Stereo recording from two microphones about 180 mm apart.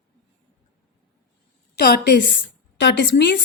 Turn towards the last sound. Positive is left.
turn(degrees=70)  # may be behind; listen again after turning